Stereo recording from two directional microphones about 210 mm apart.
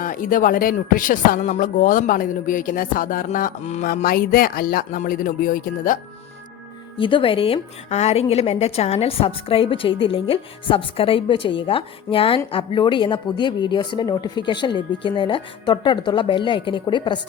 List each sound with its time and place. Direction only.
0.0 s speech: 40° left (ahead or behind)
7.0 s a woman's voice: 25° left (ahead or behind)